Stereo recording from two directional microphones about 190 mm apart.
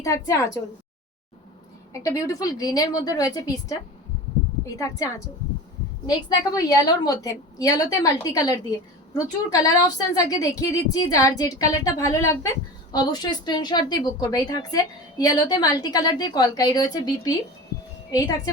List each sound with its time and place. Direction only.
0.0 s a woman's voice: 15° left (ahead or behind)
1.9 s a woman's voice: 15° left (ahead or behind)
6.1 s a woman's voice: 20° left (ahead or behind)